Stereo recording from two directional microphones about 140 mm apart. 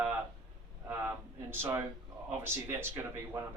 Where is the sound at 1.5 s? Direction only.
15° right (ahead or behind).